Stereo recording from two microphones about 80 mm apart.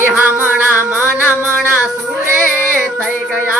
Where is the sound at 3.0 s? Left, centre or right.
Centre.